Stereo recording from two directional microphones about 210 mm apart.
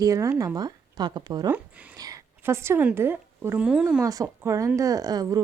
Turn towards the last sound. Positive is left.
turn(degrees=-15)  # may be behind; listen again after turning